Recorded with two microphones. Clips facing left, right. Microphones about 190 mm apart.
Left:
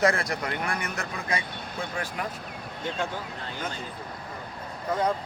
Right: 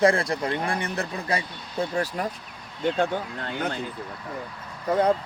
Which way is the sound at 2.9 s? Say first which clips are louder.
Right 6 dB; 60° right (ahead or behind).